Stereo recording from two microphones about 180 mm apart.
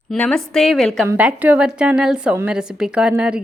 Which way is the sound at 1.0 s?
10° right (ahead or behind).